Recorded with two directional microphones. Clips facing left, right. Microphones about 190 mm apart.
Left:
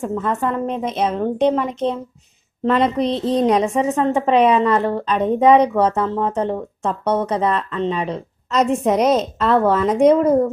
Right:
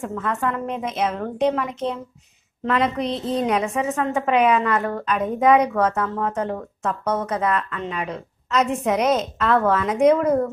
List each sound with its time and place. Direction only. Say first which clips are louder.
0.0 s a woman's voice: left 4 dB; 30° left (ahead or behind)